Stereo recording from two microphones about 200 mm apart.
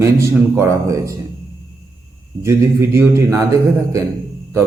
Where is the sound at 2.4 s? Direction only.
15° right (ahead or behind).